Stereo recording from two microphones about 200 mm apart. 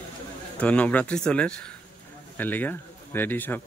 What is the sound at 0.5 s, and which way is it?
Speech, 5° left (ahead or behind).